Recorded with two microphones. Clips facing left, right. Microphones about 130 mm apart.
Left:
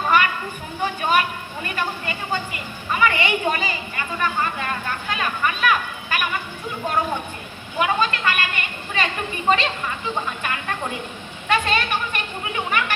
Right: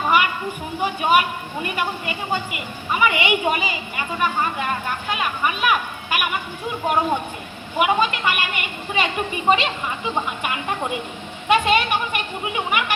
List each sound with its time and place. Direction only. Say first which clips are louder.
0.1 s a sound: even; 10° right (ahead or behind)
0.8 s a woman's voice: right 2 dB; 10° right (ahead or behind)
7.8 s a woman's voice: right 2 dB; 15° right (ahead or behind)